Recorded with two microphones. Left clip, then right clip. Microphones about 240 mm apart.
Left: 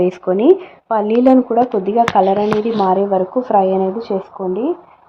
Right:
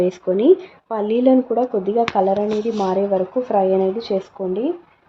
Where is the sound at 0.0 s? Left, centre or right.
Centre.